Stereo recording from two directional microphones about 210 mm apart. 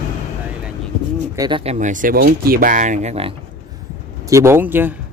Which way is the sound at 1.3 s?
25° right (ahead or behind).